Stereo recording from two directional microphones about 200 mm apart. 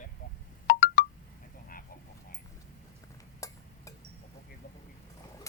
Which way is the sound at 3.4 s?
15° left (ahead or behind).